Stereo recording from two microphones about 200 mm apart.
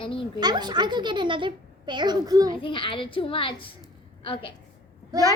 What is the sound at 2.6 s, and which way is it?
Speech, 25° left (ahead or behind).